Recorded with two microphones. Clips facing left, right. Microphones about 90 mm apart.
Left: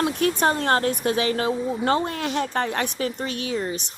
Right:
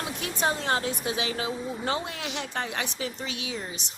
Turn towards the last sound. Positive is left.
turn(degrees=50)  # may be behind; listen again after turning